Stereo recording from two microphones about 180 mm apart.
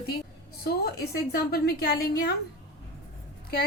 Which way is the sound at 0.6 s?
60° left (ahead or behind).